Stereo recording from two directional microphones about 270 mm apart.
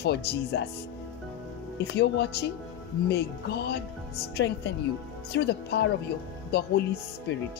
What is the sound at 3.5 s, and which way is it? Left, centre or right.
Speech, left.